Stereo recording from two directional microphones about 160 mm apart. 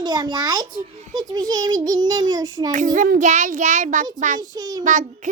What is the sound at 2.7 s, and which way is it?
A child's voice, 50° right (ahead or behind).